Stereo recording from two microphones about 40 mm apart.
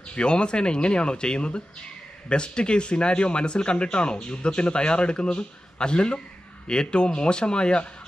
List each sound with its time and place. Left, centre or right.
0.1 s speech: left